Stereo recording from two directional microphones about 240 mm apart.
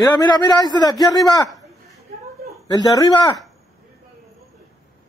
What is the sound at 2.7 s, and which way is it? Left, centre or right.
Speech, centre.